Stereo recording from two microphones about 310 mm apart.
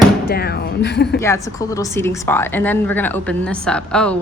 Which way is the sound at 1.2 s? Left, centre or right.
Centre.